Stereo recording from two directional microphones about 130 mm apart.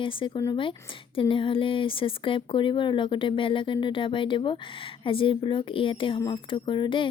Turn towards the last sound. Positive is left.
turn(degrees=40)  # may be behind; listen again after turning